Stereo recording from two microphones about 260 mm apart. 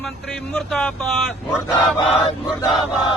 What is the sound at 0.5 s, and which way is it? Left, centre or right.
Speech, centre.